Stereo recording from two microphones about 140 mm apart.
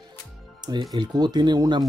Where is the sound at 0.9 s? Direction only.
30° right (ahead or behind).